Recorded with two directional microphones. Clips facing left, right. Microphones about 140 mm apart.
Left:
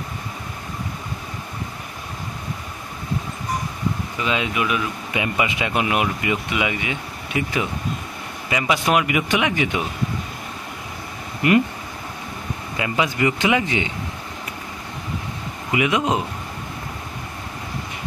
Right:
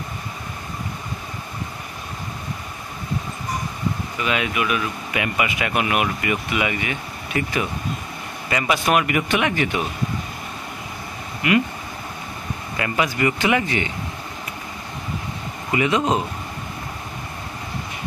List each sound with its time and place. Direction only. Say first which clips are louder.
4.2 s speech: even; 25° left (ahead or behind)
12.7 s speech: even; 15° left (ahead or behind)
15.7 s speech: right 1 dB; 10° left (ahead or behind)